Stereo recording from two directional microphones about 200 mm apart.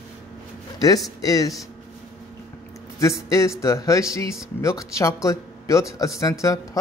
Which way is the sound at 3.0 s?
15° left (ahead or behind).